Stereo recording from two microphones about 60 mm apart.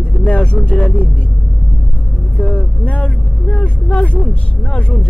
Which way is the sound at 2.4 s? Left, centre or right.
Left.